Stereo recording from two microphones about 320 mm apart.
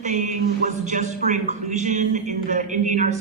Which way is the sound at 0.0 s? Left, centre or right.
Right.